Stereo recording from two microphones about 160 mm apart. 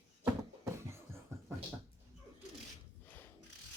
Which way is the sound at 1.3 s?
15° right (ahead or behind).